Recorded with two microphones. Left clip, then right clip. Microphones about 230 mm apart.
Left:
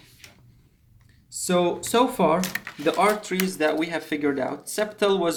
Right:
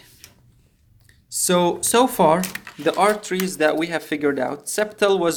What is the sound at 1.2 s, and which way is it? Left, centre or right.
Speech, right.